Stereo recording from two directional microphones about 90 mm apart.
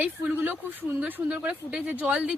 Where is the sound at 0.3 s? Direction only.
20° right (ahead or behind).